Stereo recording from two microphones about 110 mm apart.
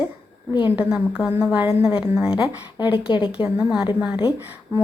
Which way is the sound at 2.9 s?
50° left (ahead or behind).